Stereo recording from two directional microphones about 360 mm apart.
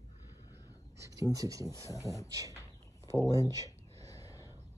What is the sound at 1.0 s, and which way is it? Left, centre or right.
Speech, centre.